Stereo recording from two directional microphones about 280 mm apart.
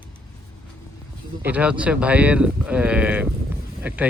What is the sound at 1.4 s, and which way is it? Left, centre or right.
Speech, centre.